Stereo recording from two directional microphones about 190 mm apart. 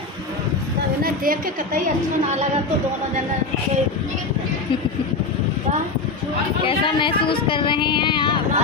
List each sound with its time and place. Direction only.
1.0 s a woman's voice: 50° right (ahead or behind)
7.0 s speech: 25° left (ahead or behind)